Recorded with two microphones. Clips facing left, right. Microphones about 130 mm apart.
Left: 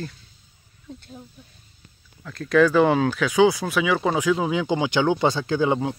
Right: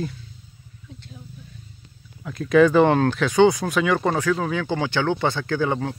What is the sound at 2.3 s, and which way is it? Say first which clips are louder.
Speech: right 2 dB; 5° right (ahead or behind).